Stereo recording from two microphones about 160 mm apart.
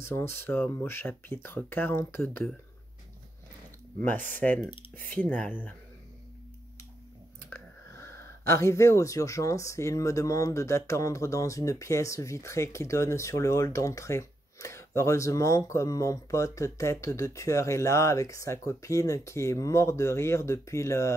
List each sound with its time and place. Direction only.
0.0 s speech: 15° left (ahead or behind)
4.3 s speech: 10° left (ahead or behind)
4.9 s speech: 60° right (ahead or behind)
5.2 s speech: 10° left (ahead or behind)
7.4 s speech: 15° left (ahead or behind)